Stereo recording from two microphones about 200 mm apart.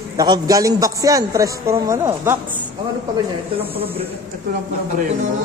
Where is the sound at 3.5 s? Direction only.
30° right (ahead or behind).